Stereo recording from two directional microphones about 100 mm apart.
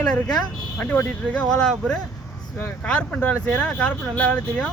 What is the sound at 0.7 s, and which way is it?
Speech, 20° left (ahead or behind).